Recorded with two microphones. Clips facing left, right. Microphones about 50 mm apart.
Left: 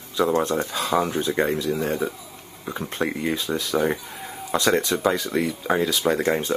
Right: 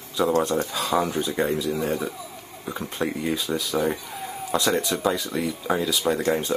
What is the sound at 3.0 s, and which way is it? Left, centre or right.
Speech, centre.